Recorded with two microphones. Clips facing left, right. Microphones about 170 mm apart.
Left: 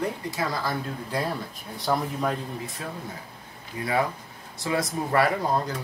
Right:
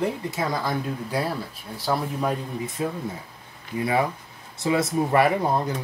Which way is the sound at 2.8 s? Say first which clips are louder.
Right 12 dB; 20° right (ahead or behind).